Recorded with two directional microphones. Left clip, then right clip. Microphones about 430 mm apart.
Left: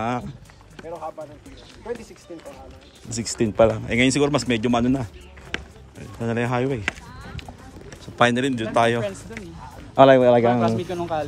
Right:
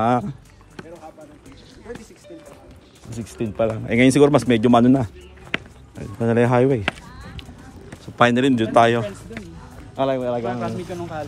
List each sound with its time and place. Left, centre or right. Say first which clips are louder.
0.0 s speech: right 7 dB; centre
3.2 s speech: left 5 dB; centre
5.5 s basketball bounce: right 4 dB; centre
5.9 s speech: right 7 dB; centre
8.2 s speech: right 3 dB; centre
9.9 s speech: left 9 dB; centre